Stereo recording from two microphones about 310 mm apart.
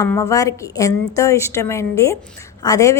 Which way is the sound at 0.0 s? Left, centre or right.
Centre.